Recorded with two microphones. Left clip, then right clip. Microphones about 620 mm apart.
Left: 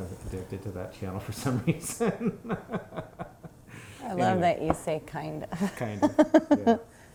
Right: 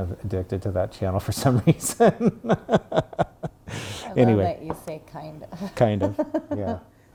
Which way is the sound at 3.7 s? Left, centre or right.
Right.